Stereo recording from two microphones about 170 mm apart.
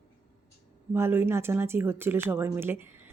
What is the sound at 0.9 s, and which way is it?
Speech, 15° right (ahead or behind).